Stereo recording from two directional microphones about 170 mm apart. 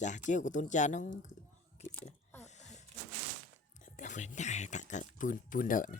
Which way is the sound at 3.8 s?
50° left (ahead or behind).